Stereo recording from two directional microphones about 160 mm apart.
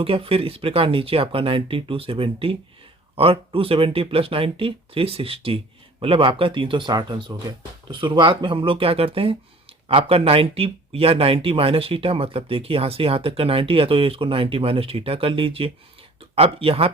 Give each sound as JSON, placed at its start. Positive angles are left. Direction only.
{"t": 0.0, "sound": "speech", "side_deg": -35}